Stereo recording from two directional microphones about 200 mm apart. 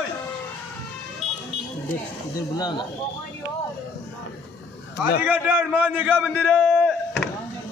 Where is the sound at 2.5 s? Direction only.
20° left (ahead or behind).